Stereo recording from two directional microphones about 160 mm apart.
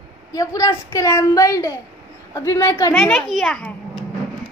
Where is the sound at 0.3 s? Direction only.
20° left (ahead or behind).